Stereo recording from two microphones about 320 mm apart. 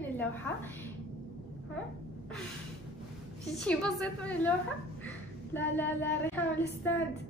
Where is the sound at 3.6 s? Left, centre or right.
Centre.